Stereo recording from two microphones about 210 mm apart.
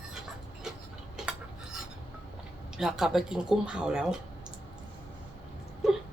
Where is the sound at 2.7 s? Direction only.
Centre (ahead or behind).